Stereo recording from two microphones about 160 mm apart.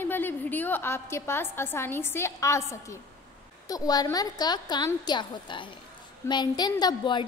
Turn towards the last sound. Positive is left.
turn(degrees=25)  # may be behind; listen again after turning